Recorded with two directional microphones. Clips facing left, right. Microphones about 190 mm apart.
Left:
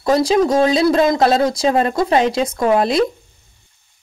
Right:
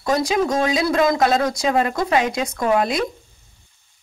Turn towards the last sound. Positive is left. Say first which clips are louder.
# left 4 dB
turn(degrees=35)  # may be behind; listen again after turning